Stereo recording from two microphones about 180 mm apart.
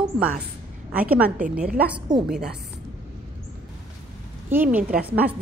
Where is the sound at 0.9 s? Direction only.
10° right (ahead or behind).